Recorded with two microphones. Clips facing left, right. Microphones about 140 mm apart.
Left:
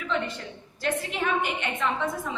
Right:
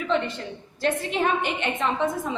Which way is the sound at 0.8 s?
30° right (ahead or behind).